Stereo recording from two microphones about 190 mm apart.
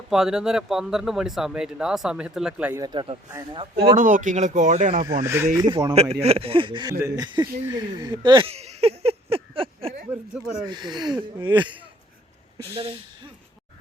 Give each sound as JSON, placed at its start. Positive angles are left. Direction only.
{"t": 0.1, "sound": "speech", "side_deg": -5}
{"t": 2.8, "sound": "speech", "side_deg": -25}
{"t": 3.9, "sound": "speech", "side_deg": -45}
{"t": 5.2, "sound": "speech", "side_deg": -15}
{"t": 7.7, "sound": "a sound", "side_deg": -20}
{"t": 10.1, "sound": "speech", "side_deg": -5}
{"t": 10.7, "sound": "speech", "side_deg": -20}